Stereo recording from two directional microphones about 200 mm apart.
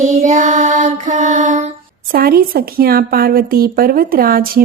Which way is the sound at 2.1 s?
50° right (ahead or behind).